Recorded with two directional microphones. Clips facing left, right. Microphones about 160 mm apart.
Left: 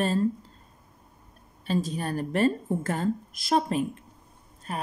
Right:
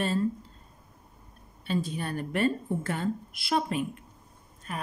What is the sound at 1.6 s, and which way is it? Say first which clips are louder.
A woman's voice: left 3 dB; 40° left (ahead or behind).